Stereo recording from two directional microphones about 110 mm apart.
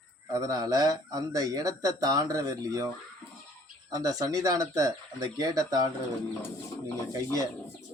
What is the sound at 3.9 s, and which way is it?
Speech, 35° right (ahead or behind).